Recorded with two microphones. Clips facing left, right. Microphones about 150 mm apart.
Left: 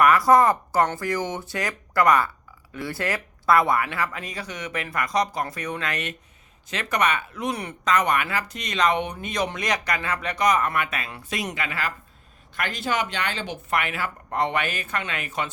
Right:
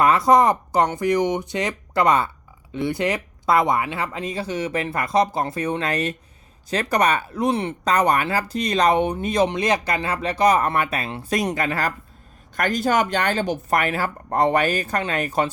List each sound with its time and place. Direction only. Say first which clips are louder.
0.0 s speech: right 1 dB; 25° right (ahead or behind); by 15.4 s 40° right (ahead or behind)